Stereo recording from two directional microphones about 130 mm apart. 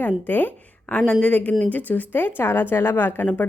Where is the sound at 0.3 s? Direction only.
15° left (ahead or behind).